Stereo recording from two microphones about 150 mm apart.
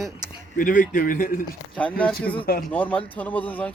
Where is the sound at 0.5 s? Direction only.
65° left (ahead or behind).